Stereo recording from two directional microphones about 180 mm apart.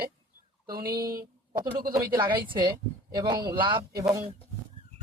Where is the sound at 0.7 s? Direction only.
55° right (ahead or behind).